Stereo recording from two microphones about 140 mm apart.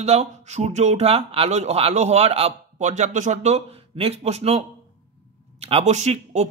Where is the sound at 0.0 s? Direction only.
50° right (ahead or behind).